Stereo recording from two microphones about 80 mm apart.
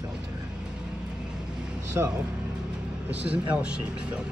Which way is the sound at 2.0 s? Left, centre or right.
Right.